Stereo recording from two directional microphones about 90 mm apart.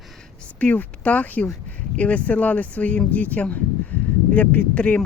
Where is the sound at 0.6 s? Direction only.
15° left (ahead or behind).